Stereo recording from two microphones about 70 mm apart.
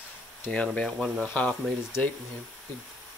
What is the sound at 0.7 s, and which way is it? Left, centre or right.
Speech, centre.